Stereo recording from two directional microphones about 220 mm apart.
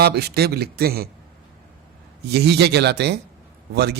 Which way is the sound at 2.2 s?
50° right (ahead or behind).